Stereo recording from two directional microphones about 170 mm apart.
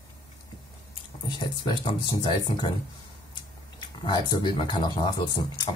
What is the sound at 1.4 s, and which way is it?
Speech, 30° left (ahead or behind).